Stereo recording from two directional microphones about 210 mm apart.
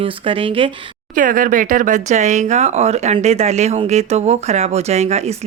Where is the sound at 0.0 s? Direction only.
25° right (ahead or behind).